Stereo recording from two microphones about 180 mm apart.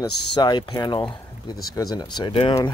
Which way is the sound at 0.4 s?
25° left (ahead or behind).